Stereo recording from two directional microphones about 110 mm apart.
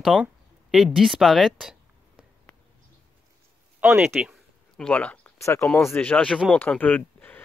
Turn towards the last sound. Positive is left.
turn(degrees=15)  # may be behind; listen again after turning